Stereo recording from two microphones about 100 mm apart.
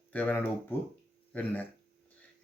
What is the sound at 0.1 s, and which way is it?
Speech, 15° left (ahead or behind).